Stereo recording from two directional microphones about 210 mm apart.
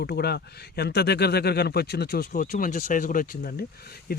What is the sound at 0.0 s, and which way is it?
Speech, 50° left (ahead or behind).